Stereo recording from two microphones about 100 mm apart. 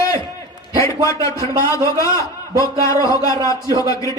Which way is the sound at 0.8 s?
30° left (ahead or behind).